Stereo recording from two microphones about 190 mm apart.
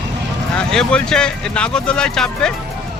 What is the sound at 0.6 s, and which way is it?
Speech, 5° left (ahead or behind).